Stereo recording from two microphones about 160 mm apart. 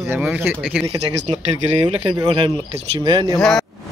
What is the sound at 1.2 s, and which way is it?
Speech, 35° right (ahead or behind).